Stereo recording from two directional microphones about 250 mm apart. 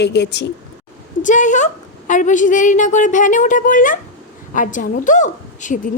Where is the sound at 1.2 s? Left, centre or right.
Left.